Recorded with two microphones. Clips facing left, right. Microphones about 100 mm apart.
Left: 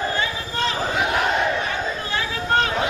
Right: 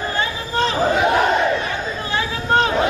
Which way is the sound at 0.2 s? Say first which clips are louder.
Right 4 dB; 30° right (ahead or behind).